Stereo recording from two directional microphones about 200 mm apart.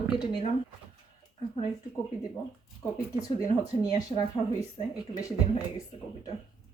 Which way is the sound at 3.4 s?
20° left (ahead or behind).